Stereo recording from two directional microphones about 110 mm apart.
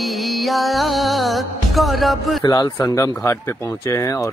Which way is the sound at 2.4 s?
35° left (ahead or behind).